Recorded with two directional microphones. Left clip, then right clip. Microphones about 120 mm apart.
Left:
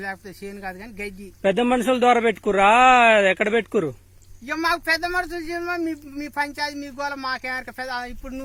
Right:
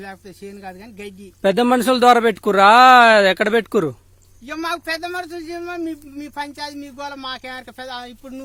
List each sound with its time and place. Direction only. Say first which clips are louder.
0.0 s speech: left 3 dB; 20° right (ahead or behind)
1.4 s speech: right 4 dB; 80° right
4.4 s a man's voice: left 3 dB; 20° right (ahead or behind)